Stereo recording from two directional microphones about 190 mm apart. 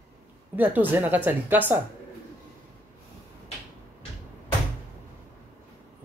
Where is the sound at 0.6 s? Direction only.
10° right (ahead or behind).